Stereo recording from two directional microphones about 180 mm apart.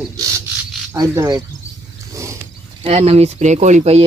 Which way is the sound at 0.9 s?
15° right (ahead or behind).